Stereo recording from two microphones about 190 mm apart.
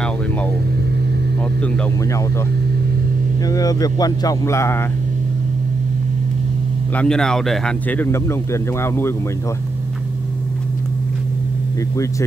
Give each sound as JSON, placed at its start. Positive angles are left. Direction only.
{"t": 3.4, "sound": "speech", "side_deg": 20}
{"t": 7.0, "sound": "speech", "side_deg": 5}